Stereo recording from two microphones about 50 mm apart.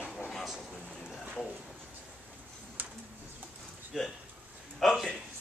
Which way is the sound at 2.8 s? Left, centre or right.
Right.